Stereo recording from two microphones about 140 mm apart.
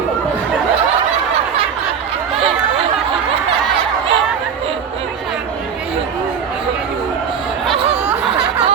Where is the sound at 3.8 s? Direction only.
40° right (ahead or behind).